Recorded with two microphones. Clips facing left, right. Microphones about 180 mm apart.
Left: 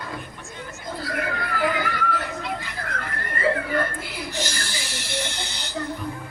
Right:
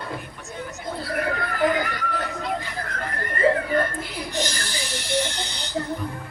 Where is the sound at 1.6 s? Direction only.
45° right (ahead or behind).